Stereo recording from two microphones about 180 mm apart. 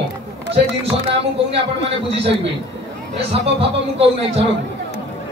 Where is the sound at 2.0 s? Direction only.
35° right (ahead or behind).